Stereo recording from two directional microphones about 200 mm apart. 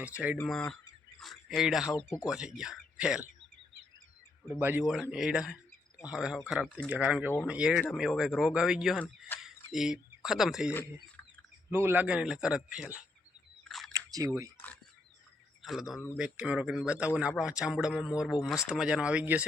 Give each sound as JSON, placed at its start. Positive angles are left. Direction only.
{"t": 0.0, "sound": "speech", "side_deg": -5}
{"t": 0.3, "sound": "speech", "side_deg": 5}
{"t": 2.0, "sound": "speech", "side_deg": 10}
{"t": 2.2, "sound": "speech", "side_deg": -5}
{"t": 4.6, "sound": "speech", "side_deg": -5}
{"t": 11.7, "sound": "speech", "side_deg": -10}
{"t": 13.7, "sound": "chewing", "side_deg": 0}
{"t": 13.9, "sound": "chewing", "side_deg": -15}
{"t": 15.6, "sound": "speech", "side_deg": 0}